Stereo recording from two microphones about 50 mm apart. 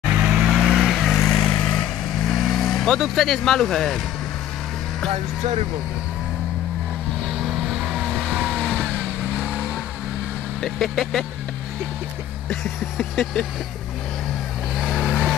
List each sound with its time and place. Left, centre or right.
0.2 s vehicle: centre
0.5 s vehicle: centre
1.2 s vehicle: centre
2.3 s speech: centre
7.4 s vehicle: centre
8.9 s vehicle: centre
10.6 s speech: centre
12.9 s speech: centre
14.8 s vehicle: centre